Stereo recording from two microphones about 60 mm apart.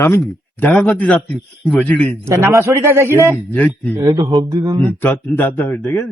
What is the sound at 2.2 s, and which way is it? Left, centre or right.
A man's voice, right.